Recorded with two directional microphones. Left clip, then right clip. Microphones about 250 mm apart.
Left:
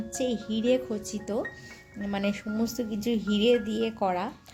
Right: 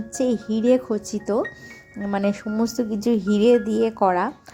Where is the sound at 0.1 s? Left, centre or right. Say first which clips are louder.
Right 7 dB; right.